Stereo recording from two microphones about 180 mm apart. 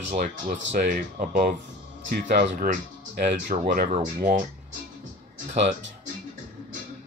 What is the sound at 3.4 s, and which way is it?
Speech, 55° right (ahead or behind).